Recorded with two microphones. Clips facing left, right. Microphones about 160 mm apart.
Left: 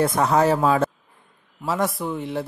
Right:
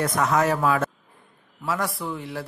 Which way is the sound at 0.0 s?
30° left (ahead or behind).